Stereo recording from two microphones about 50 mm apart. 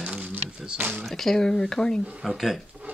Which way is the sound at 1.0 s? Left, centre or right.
Centre.